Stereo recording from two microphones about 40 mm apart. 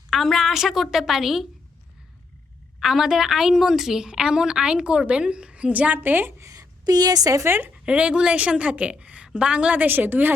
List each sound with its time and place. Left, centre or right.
0.1 s a woman's voice: centre
2.8 s a woman's voice: centre; by 6.0 s right
6.0 s a woman's voice: right
7.4 s a woman's voice: right
7.7 s a woman's voice: right
9.7 s a woman's voice: right